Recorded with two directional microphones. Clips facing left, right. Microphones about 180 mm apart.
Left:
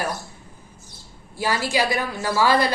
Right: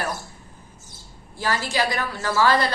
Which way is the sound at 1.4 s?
10° left (ahead or behind).